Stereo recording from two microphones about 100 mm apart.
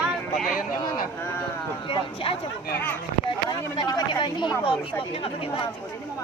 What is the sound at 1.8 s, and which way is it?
Speech, 60° left (ahead or behind).